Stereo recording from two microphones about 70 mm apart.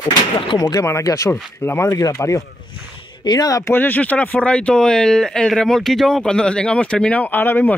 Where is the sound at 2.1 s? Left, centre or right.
Left.